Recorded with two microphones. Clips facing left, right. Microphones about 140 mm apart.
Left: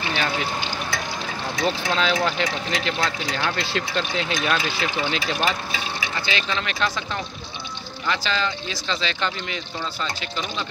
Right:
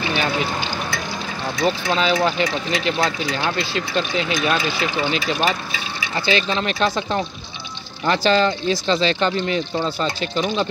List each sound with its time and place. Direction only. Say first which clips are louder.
1.6 s speech: right 3 dB; 10° right (ahead or behind)
6.2 s speech: right 9 dB; 35° right (ahead or behind)
8.1 s speech: right 8 dB; 45° right (ahead or behind)